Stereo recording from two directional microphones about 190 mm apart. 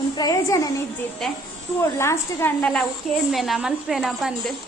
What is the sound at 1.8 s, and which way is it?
A woman's voice, 15° left (ahead or behind).